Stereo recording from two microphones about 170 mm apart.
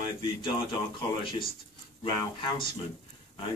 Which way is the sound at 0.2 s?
25° left (ahead or behind).